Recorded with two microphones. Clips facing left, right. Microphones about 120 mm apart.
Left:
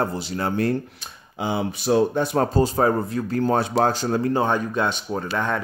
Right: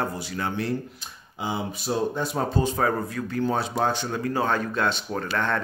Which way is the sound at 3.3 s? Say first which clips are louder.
Left 4 dB; 45° left (ahead or behind).